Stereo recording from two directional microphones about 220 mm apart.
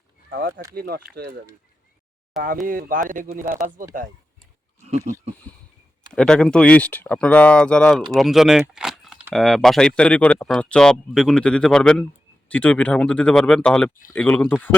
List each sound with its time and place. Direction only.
0.7 s speech: 45° right (ahead or behind)
2.6 s speech: 40° right (ahead or behind)
5.5 s a sound: 5° left (ahead or behind)
6.1 s speech: 5° left (ahead or behind)